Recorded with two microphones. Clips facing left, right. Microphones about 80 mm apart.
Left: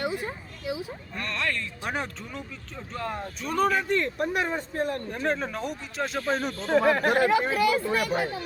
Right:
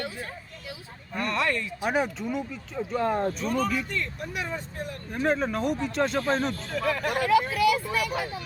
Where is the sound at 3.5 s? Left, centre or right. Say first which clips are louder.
Left 4 dB; left.